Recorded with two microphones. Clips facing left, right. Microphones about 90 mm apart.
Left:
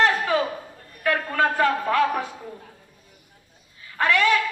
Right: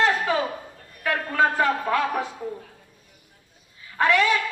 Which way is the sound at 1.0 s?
20° right (ahead or behind).